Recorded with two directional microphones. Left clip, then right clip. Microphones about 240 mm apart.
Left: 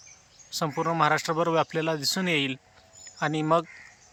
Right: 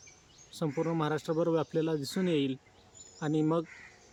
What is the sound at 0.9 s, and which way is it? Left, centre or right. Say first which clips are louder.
Speech: left 8 dB; centre.